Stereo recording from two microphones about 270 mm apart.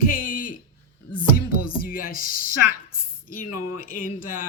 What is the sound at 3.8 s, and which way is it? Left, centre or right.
Speech, left.